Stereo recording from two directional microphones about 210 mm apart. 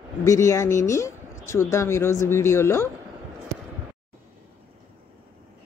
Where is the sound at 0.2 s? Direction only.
15° left (ahead or behind).